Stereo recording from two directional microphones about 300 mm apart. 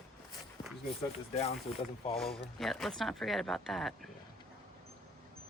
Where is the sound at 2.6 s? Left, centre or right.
Centre.